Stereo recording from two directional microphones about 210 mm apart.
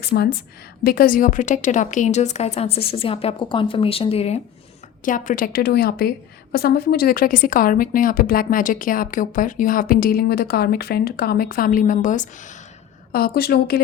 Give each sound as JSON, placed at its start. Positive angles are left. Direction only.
{"t": 0.0, "sound": "a woman's voice", "side_deg": 50}